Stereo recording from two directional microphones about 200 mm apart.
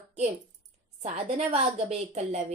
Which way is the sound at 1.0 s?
35° right (ahead or behind).